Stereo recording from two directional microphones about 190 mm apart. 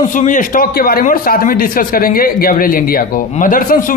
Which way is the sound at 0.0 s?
40° left (ahead or behind).